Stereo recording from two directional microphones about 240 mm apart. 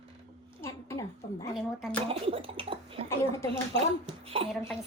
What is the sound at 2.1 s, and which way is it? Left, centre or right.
Gargling, right.